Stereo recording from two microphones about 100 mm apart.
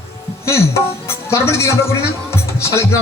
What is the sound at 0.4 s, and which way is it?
Speech, 25° left (ahead or behind).